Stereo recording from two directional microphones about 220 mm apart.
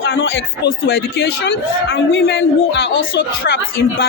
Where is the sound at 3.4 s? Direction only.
45° left (ahead or behind).